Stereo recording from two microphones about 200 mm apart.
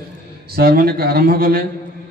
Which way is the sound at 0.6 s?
50° right (ahead or behind).